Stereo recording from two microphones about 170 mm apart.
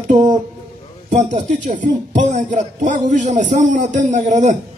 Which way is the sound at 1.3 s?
45° right (ahead or behind).